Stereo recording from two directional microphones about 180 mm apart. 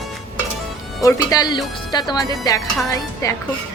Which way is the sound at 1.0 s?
20° left (ahead or behind).